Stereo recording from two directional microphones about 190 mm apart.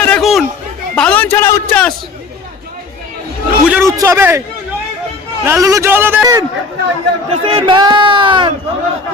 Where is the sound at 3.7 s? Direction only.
10° right (ahead or behind).